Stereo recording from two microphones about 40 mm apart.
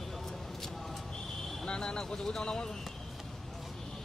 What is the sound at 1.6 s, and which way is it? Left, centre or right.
Speech, centre.